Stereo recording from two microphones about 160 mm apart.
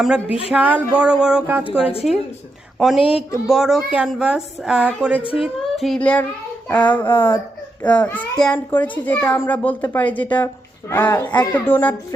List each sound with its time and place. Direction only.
0.0 s a woman's voice: 5° right (ahead or behind)
1.8 s a woman's voice: 35° left (ahead or behind)
2.7 s a woman's voice: centre (ahead or behind)